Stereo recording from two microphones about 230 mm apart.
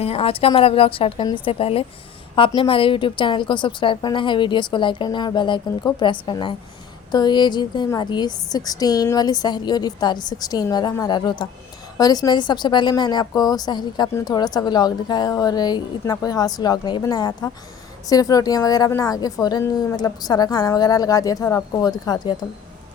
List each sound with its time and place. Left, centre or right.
0.0 s a woman's voice: left